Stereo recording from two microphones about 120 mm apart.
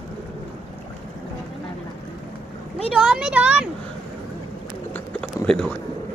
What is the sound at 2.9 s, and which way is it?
Speech, 5° right (ahead or behind).